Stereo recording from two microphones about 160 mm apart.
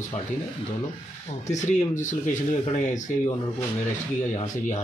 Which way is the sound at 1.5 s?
50° left (ahead or behind).